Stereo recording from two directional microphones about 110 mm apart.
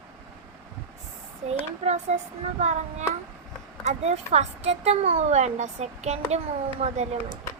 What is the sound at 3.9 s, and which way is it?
A woman's voice, 80° right.